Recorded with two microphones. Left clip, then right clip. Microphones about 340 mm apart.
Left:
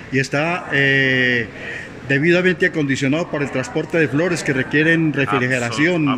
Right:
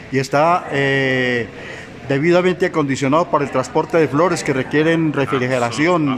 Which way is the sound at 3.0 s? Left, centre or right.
Right.